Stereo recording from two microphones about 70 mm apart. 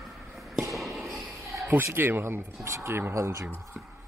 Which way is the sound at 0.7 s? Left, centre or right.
Centre.